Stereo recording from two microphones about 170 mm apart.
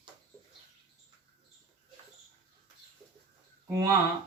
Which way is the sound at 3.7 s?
15° right (ahead or behind).